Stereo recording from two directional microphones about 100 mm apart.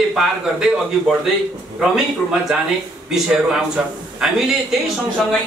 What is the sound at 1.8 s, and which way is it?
A man's voice, 5° right (ahead or behind).